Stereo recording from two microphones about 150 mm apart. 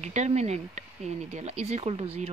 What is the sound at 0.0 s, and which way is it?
Speech, 50° right (ahead or behind).